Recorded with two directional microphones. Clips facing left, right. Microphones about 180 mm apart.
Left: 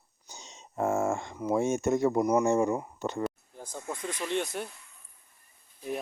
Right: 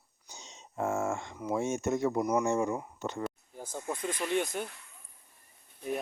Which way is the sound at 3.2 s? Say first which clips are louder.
Left 3 dB; 5° right (ahead or behind).